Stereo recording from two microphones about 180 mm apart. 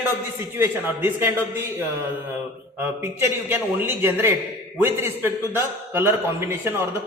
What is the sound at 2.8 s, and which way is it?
A man's voice, 10° right (ahead or behind).